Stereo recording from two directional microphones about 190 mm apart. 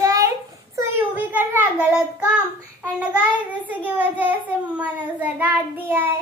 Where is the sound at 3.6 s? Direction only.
10° right (ahead or behind).